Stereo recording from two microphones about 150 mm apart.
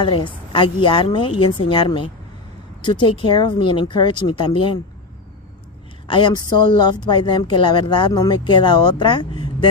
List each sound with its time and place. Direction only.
0.0 s a woman's voice: 35° left (ahead or behind)
6.0 s a woman's voice: 30° left (ahead or behind)